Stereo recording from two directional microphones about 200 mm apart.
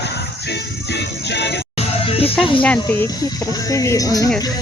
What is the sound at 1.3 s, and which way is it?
Music, 55° left (ahead or behind).